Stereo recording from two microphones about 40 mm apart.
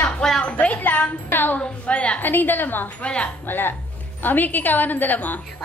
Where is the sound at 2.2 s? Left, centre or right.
Left.